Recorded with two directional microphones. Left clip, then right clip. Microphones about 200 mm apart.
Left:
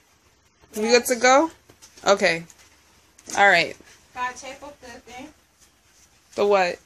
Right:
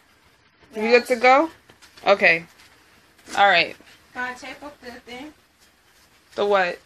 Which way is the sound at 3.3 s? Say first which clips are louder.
Even; 35° left (ahead or behind).